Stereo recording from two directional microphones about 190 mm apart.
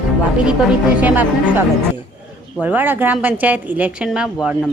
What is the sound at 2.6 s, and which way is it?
A woman's voice, 10° right (ahead or behind).